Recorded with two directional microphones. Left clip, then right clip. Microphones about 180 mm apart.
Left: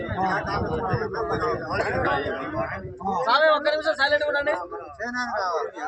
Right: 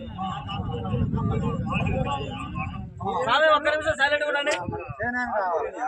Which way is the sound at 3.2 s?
15° right (ahead or behind).